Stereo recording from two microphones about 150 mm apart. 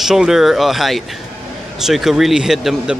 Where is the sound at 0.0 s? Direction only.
5° right (ahead or behind).